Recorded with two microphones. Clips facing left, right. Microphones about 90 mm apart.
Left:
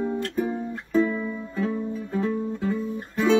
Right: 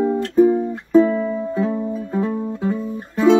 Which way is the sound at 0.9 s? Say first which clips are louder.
Right 9 dB; 40° right (ahead or behind).